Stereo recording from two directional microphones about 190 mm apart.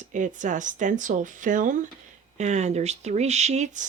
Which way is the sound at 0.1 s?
40° right (ahead or behind).